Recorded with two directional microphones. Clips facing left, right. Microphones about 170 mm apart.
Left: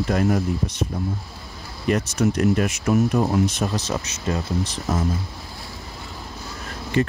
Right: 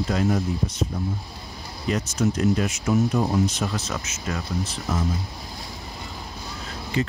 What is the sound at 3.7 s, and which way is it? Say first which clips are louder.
Speech: left 4 dB; 35° left (ahead or behind).